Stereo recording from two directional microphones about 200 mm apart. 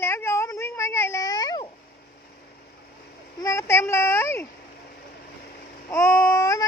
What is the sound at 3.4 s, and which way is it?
Speech, 15° left (ahead or behind).